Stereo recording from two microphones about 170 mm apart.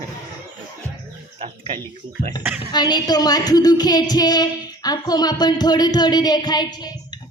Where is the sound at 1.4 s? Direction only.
30° right (ahead or behind).